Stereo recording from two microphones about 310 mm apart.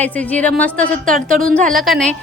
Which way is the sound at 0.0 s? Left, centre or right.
Centre.